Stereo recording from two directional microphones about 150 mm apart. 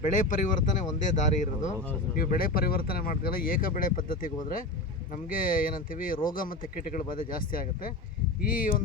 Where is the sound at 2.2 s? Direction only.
75° left (ahead or behind).